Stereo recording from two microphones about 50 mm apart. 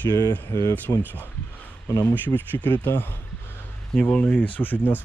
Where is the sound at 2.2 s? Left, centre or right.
Left.